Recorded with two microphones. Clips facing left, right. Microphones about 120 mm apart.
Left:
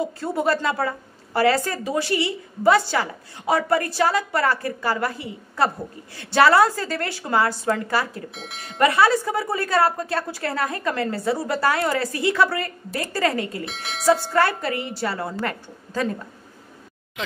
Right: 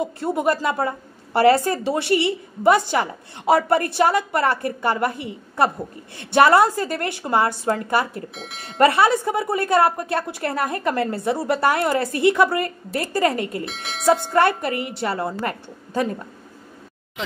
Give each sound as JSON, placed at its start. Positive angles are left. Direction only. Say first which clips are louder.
{"t": 0.2, "sound": "a woman's voice", "louder": "right 2 dB", "side_deg": -15}
{"t": 8.4, "sound": "speech", "louder": "right 1 dB", "side_deg": 0}
{"t": 8.7, "sound": "a woman's voice", "louder": "right 2 dB", "side_deg": -30}
{"t": 13.7, "sound": "speech", "louder": "even", "side_deg": 0}
{"t": 14.3, "sound": "a woman's voice", "louder": "right 2 dB", "side_deg": -25}